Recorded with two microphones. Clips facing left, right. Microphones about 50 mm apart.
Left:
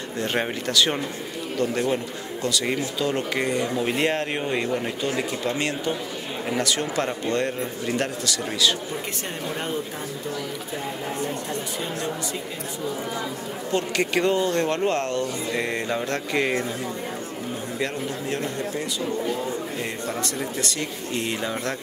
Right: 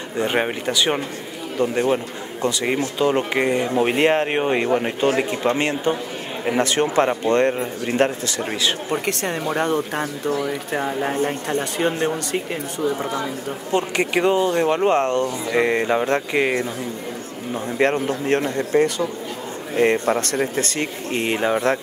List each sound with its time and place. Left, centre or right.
0.2 s a man's voice: centre
8.9 s speech: right
10.3 s speech: right
13.7 s speech: right
17.7 s a man's voice: right